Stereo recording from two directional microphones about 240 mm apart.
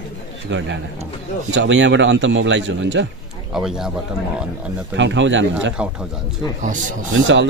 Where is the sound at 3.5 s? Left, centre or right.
Centre.